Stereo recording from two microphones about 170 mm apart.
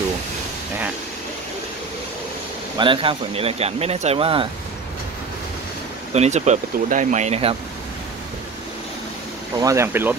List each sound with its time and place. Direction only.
2.8 s speech: 30° right (ahead or behind)
6.1 s speech: 40° right (ahead or behind)
9.6 s speech: 20° right (ahead or behind)